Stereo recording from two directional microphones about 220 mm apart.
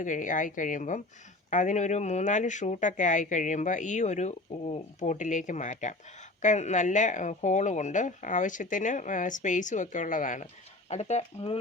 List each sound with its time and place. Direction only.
0.0 s speech: 35° left (ahead or behind)